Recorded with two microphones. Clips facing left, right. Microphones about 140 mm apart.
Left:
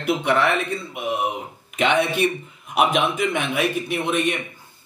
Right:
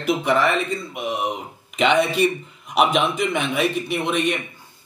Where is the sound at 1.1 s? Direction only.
5° left (ahead or behind).